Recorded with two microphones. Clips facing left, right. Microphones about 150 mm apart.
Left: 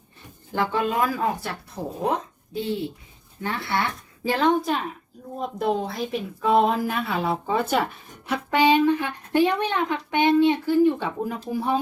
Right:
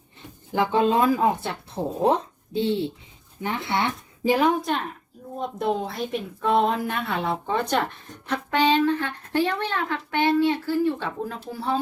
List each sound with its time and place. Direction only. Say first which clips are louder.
0.5 s speech: right 3 dB; 20° right (ahead or behind)
4.4 s a woman's voice: left 4 dB; 5° right (ahead or behind); by 11.8 s 15° left (ahead or behind)